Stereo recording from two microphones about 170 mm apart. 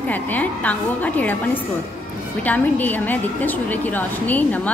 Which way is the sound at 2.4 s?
10° left (ahead or behind).